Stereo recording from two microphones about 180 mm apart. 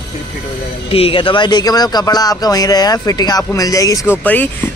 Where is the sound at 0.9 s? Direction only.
30° left (ahead or behind).